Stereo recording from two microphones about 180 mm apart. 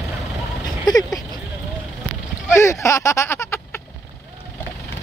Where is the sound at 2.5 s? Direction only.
15° left (ahead or behind).